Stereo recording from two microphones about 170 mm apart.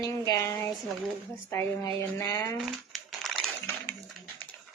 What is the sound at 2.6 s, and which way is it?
Crumpling, centre (ahead or behind).